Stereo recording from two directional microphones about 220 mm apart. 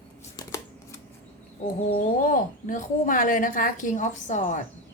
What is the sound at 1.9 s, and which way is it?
A woman's voice, 40° left (ahead or behind).